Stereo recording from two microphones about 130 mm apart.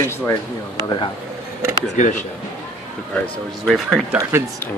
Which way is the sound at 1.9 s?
65° left (ahead or behind).